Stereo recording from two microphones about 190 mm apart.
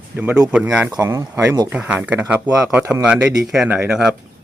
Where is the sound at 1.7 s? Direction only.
10° right (ahead or behind).